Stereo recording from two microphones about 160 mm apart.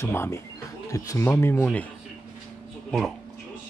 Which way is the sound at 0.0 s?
15° left (ahead or behind).